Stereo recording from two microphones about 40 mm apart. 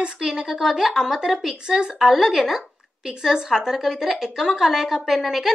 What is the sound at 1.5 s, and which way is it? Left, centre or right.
A woman's voice, right.